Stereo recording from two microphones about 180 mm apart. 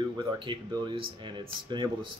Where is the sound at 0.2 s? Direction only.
25° right (ahead or behind).